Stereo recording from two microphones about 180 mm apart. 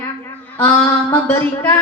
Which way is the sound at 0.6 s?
10° left (ahead or behind).